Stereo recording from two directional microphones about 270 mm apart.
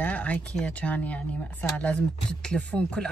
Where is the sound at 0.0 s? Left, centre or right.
Centre.